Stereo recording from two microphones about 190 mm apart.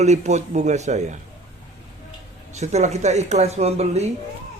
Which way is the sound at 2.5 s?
35° right (ahead or behind).